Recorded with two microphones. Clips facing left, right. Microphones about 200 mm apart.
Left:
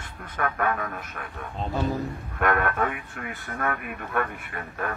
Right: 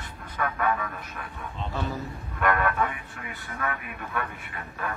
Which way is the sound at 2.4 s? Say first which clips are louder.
Left 1 dB; 55° left (ahead or behind).